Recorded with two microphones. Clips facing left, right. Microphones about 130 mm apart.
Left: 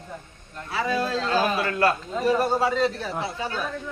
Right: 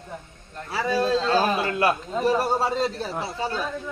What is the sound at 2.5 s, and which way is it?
Speech, 30° right (ahead or behind).